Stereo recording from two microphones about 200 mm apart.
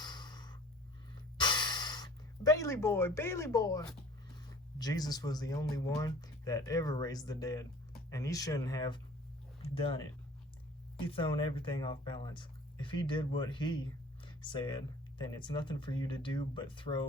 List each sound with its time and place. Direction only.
0.0 s snort: 20° left (ahead or behind)
1.4 s gasp: 20° left (ahead or behind)
4.8 s speech: 20° left (ahead or behind)
9.6 s a sound: 30° left (ahead or behind)
11.1 s speech: 25° left (ahead or behind)